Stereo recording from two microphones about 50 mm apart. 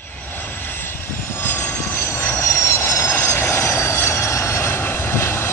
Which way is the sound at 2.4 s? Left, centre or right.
Left.